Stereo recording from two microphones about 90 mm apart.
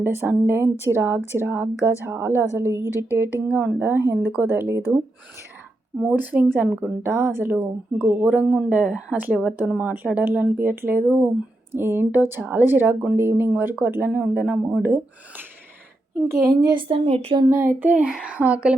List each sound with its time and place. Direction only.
0.0 s a woman's voice: 20° right (ahead or behind)
6.0 s a woman's voice: 15° right (ahead or behind)
8.7 s child singing: 15° right (ahead or behind)
9.6 s a woman's voice: 15° right (ahead or behind); by 16.7 s 45° right (ahead or behind)
16.7 s a woman's voice: 75° right (ahead or behind)
17.5 s child singing: 25° right (ahead or behind)